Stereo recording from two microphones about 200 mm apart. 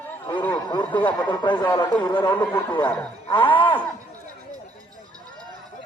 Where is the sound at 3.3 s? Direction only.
25° left (ahead or behind).